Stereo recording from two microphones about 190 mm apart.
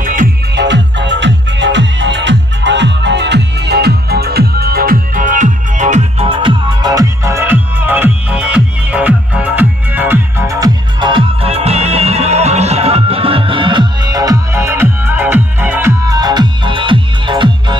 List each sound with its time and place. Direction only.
0.0 s music: 45° right (ahead or behind)
0.6 s music: 70° right (ahead or behind); by 17.7 s 25° right (ahead or behind)